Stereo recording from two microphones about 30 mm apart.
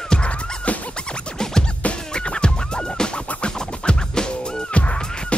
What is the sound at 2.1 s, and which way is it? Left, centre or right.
Music, left.